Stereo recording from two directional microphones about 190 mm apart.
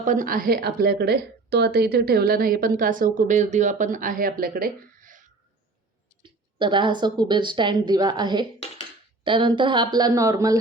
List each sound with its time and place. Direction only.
0.0 s a woman's voice: 45° right (ahead or behind)
6.2 s speech: 25° right (ahead or behind)